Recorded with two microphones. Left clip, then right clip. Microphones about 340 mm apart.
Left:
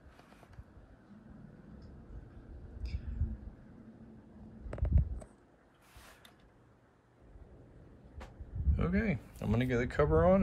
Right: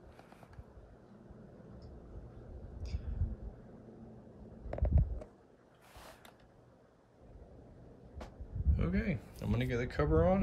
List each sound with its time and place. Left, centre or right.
2.8 s vehicle: centre
4.6 s a sound: left
8.7 s speech: centre